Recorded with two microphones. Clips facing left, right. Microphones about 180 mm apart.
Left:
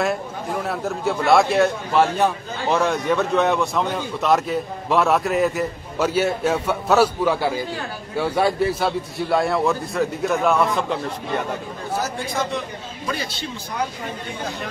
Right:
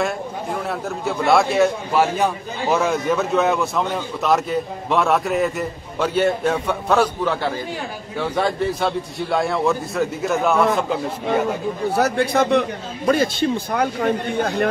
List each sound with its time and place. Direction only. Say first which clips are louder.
0.0 s a man's voice: even; centre (ahead or behind)
12.0 s speech: right 9 dB; 65° right (ahead or behind)